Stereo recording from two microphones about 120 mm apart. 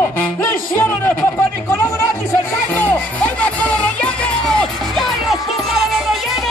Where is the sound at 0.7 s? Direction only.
20° left (ahead or behind).